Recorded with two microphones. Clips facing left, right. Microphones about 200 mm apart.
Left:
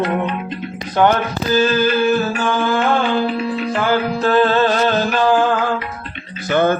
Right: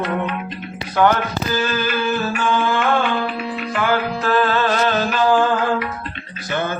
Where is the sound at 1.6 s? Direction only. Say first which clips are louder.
Left 8 dB; 30° left (ahead or behind).